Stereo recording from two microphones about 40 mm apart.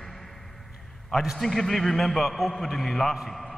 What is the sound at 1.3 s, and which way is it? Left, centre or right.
A man's voice, centre.